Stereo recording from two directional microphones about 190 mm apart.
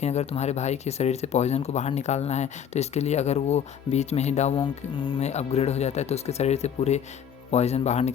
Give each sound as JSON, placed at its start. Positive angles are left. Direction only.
{"t": 0.0, "sound": "speech", "side_deg": 35}